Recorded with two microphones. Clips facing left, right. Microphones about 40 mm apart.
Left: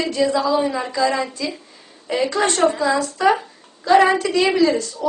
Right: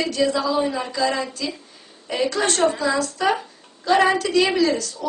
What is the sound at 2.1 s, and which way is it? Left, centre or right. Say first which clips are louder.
Speech: left 2 dB; left.